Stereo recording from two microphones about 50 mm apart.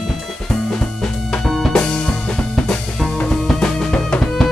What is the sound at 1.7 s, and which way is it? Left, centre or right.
Music, centre.